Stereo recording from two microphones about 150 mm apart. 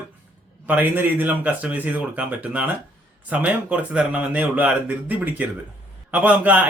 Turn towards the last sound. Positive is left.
turn(degrees=-10)  # may be behind; listen again after turning